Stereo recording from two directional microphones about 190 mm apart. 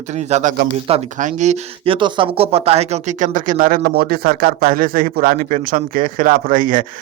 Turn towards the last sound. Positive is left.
turn(degrees=-45)  # may be behind; listen again after turning